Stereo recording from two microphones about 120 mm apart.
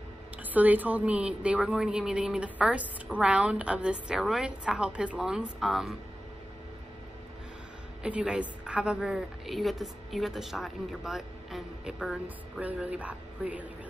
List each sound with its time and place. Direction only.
0.4 s a woman's voice: 15° right (ahead or behind)
8.0 s a woman's voice: 10° right (ahead or behind)